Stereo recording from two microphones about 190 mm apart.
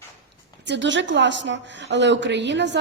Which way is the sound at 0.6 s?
70° right (ahead or behind).